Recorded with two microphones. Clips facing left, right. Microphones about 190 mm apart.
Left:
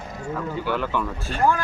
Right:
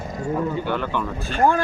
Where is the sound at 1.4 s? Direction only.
30° right (ahead or behind).